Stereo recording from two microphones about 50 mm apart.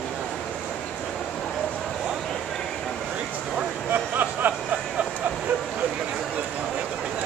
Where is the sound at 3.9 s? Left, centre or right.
Right.